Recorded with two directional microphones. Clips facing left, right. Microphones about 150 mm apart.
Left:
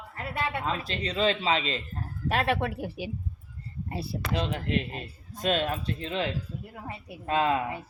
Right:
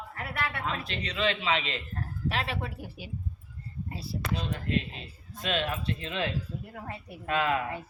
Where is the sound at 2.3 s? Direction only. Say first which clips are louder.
Left 9 dB; 55° left (ahead or behind).